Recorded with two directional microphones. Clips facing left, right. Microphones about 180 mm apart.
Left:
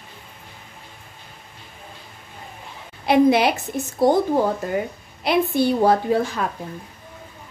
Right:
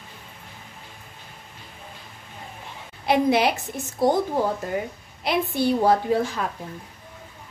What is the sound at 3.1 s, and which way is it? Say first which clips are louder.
Speech: left 4 dB; 70° left (ahead or behind).